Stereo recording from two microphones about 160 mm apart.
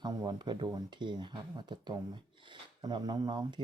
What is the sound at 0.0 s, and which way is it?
Speech, 25° right (ahead or behind).